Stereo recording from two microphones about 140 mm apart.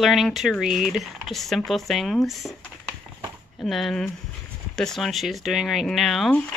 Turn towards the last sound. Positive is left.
turn(degrees=0)  # may be behind; listen again after turning